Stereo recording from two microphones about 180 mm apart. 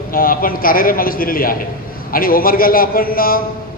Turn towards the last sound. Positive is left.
turn(degrees=55)  # may be behind; listen again after turning